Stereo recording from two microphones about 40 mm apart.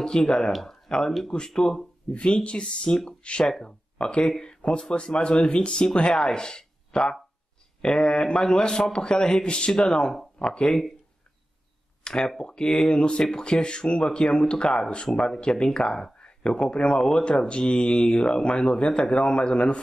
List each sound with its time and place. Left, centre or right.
0.0 s speech: centre
0.5 s speech: centre
0.8 s speech: centre
12.0 s a sound: centre
12.4 s speech: centre